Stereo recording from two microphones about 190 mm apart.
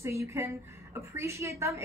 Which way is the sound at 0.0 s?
15° right (ahead or behind).